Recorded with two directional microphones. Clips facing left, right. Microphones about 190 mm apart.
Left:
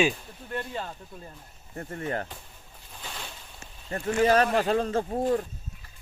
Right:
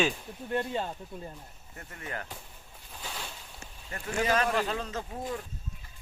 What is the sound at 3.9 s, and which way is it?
Speech, 40° left (ahead or behind).